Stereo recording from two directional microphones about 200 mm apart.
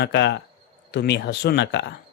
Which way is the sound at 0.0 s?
60° left (ahead or behind).